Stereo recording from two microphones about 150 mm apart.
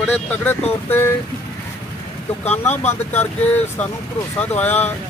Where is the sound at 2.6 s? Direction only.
10° left (ahead or behind).